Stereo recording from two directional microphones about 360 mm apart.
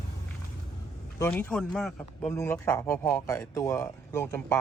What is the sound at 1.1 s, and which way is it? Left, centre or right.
Speech, centre.